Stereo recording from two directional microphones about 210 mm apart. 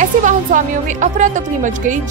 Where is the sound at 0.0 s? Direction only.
40° right (ahead or behind).